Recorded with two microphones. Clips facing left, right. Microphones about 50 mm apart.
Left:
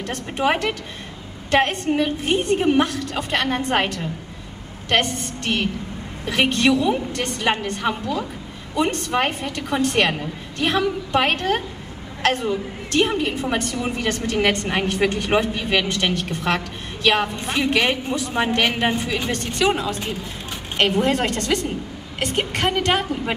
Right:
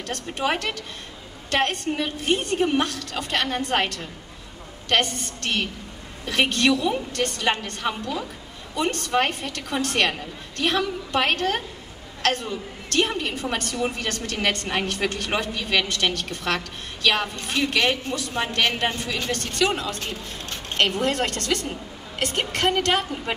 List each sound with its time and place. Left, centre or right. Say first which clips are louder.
0.0 s a woman's voice: left 4 dB; centre
13.9 s a woman's voice: left 6 dB; centre